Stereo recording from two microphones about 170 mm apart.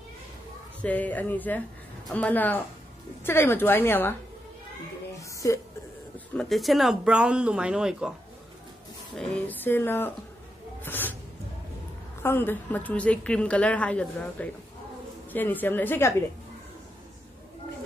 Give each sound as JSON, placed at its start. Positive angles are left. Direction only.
{"t": 0.8, "sound": "a woman's voice", "side_deg": 10}
{"t": 5.3, "sound": "a sound", "side_deg": 20}
{"t": 6.1, "sound": "speech", "side_deg": 5}
{"t": 9.1, "sound": "a woman's voice", "side_deg": 5}
{"t": 10.8, "sound": "a sound", "side_deg": 10}
{"t": 12.2, "sound": "a woman's voice", "side_deg": 15}